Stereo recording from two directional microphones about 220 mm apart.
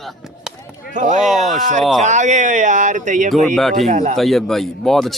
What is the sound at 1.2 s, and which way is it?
Speech, centre (ahead or behind).